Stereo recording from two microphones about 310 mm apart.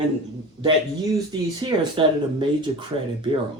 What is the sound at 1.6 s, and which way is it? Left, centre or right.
Speech, centre.